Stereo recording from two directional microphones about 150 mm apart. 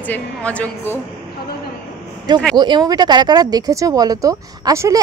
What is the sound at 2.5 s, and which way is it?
Speech, 30° right (ahead or behind).